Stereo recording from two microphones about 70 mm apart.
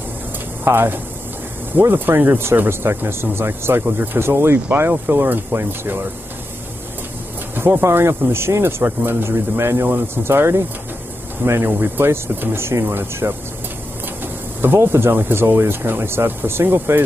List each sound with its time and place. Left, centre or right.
0.7 s speech: right
7.5 s speech: right